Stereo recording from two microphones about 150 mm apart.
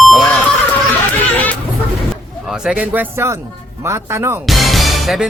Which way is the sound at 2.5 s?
5° right (ahead or behind).